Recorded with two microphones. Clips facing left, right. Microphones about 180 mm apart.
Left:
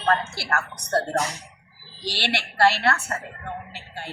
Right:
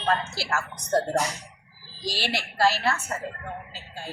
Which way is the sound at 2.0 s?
70° left (ahead or behind).